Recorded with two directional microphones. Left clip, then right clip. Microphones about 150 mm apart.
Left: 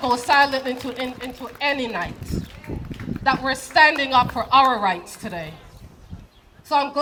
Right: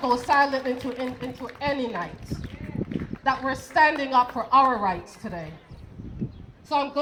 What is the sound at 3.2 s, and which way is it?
A woman's voice, centre (ahead or behind).